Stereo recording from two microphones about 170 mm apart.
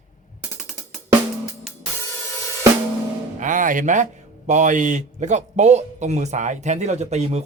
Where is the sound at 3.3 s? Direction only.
50° right (ahead or behind).